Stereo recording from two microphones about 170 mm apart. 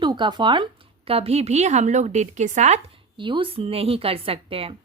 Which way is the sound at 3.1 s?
30° right (ahead or behind).